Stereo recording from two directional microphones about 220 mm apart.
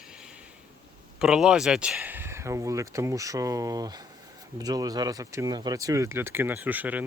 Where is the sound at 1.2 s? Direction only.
5° right (ahead or behind).